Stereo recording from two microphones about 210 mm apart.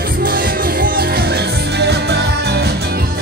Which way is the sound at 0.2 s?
45° right (ahead or behind).